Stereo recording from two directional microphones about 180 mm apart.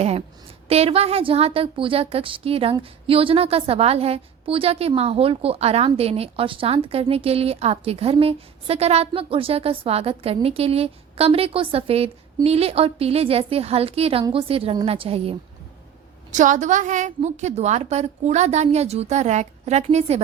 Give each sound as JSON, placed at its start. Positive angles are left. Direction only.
{"t": 0.7, "sound": "a woman's voice", "side_deg": -35}
{"t": 16.3, "sound": "a woman's voice", "side_deg": -45}